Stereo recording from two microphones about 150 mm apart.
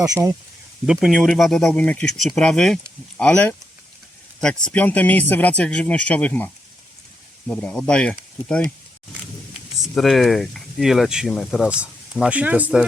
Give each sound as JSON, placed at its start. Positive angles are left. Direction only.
{"t": 0.0, "sound": "speech", "side_deg": -25}
{"t": 0.9, "sound": "speech", "side_deg": 0}
{"t": 9.7, "sound": "speech", "side_deg": 0}